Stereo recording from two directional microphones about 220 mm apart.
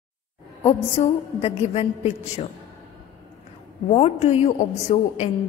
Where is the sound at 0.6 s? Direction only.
25° left (ahead or behind).